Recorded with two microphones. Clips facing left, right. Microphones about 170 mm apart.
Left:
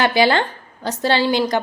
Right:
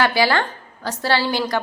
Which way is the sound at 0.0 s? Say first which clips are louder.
Left 2 dB; 20° left (ahead or behind).